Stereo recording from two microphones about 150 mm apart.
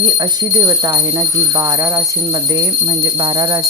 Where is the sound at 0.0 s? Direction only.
25° right (ahead or behind).